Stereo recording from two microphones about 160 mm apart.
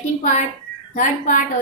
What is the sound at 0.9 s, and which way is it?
Speech, 55° left (ahead or behind).